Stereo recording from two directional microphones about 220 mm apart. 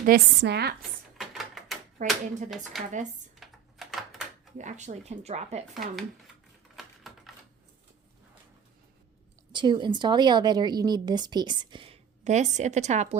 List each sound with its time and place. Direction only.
0.0 s speech: 45° right (ahead or behind)
0.8 s typewriter: centre (ahead or behind)
2.0 s speech: 35° right (ahead or behind)
2.8 s speech: centre (ahead or behind)
3.4 s typewriter: centre (ahead or behind)
4.5 s speech: 35° right (ahead or behind)
5.7 s speech: centre (ahead or behind)
7.1 s typing: centre (ahead or behind)
9.5 s speech: 20° right (ahead or behind)